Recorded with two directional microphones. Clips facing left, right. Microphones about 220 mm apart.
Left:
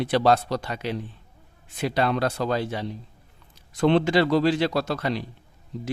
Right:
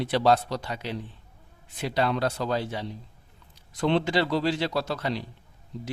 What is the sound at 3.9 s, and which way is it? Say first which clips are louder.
Speech: left 4 dB; 55° left (ahead or behind).